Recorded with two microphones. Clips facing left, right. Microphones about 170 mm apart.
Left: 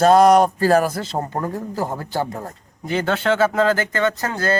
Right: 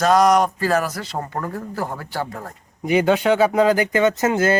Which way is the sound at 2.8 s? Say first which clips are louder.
Right 4 dB; 10° right (ahead or behind).